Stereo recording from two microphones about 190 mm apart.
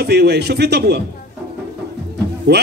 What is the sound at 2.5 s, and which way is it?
Speech, 60° right (ahead or behind).